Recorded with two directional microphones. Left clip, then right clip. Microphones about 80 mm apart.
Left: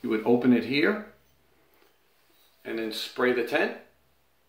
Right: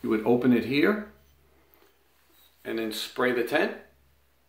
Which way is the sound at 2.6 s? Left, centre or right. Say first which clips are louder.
Right 1 dB; centre.